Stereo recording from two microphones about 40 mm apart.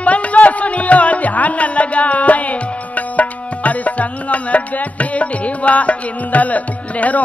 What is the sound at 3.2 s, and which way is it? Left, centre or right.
Tabla, left.